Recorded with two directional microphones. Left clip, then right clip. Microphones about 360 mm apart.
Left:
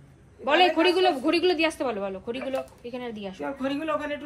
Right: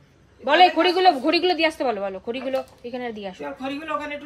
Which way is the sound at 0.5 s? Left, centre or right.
Right.